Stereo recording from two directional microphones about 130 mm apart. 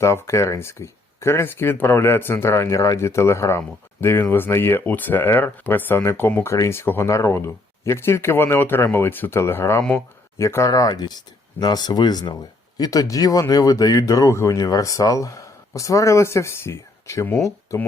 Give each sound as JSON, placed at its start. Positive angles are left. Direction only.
{"t": 0.0, "sound": "speech", "side_deg": 20}